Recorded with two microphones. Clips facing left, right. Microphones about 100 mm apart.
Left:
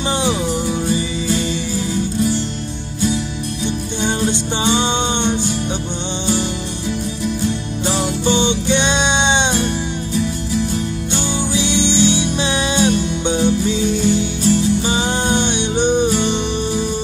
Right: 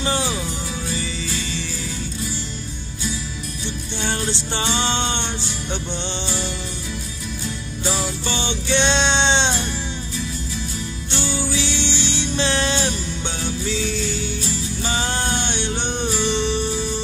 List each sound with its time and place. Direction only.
0.0 s music: 20° left (ahead or behind)
4.0 s music: 15° left (ahead or behind)
7.9 s music: 20° left (ahead or behind)
11.2 s music: 20° left (ahead or behind)